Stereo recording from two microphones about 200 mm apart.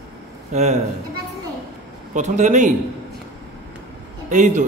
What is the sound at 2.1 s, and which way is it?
Speech, 35° right (ahead or behind).